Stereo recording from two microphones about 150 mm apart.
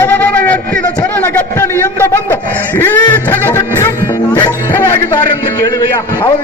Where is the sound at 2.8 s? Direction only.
15° left (ahead or behind).